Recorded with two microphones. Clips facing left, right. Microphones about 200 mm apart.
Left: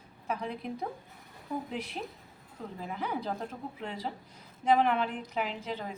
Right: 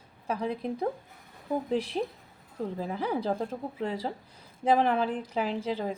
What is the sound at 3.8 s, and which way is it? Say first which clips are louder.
A woman's voice: right 6 dB; 35° right (ahead or behind).